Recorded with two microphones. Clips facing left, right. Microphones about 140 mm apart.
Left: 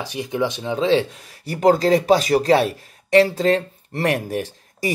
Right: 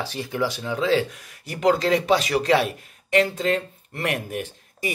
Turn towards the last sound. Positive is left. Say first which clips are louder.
# left 4 dB
turn(degrees=35)  # may be behind; listen again after turning